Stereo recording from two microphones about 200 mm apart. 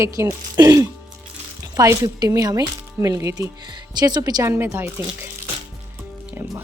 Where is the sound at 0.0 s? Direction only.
15° right (ahead or behind).